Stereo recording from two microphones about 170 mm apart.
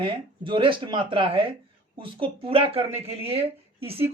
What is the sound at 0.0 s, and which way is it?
Speech, 30° right (ahead or behind).